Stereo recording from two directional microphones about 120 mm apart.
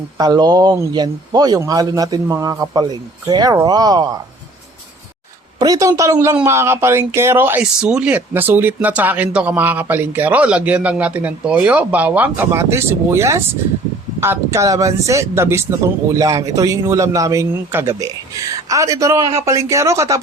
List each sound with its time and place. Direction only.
0.2 s a man's voice: 35° right (ahead or behind)
5.5 s a man's voice: 30° right (ahead or behind)
7.6 s a man's voice: 5° right (ahead or behind); by 20.1 s 25° right (ahead or behind)